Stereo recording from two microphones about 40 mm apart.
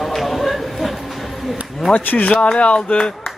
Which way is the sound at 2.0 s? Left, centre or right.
Left.